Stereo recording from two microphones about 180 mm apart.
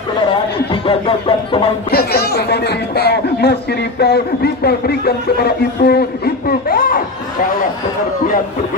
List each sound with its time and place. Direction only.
0.8 s speech: 30° left (ahead or behind)
1.9 s speech: 60° left (ahead or behind)